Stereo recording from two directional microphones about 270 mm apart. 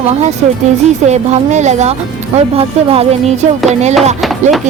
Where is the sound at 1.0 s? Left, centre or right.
Right.